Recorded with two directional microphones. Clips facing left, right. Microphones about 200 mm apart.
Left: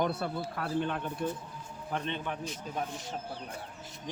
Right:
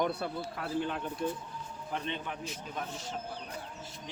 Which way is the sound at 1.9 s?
50° left (ahead or behind).